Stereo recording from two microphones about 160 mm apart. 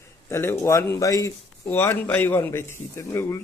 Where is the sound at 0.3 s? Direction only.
15° left (ahead or behind).